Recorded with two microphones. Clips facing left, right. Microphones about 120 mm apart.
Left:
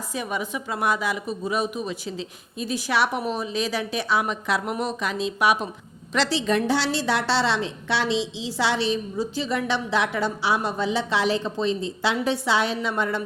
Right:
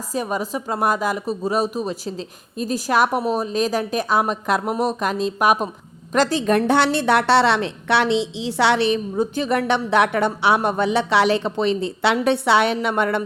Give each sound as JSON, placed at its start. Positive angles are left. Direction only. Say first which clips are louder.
{"t": 0.1, "sound": "a woman's voice", "louder": "right 5 dB", "side_deg": -40}